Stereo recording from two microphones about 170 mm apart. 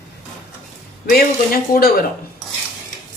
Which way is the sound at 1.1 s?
60° left (ahead or behind).